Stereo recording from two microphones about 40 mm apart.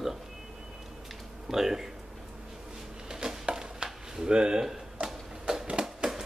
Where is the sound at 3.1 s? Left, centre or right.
Centre.